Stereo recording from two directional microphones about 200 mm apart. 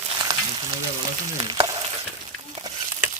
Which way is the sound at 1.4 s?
20° right (ahead or behind).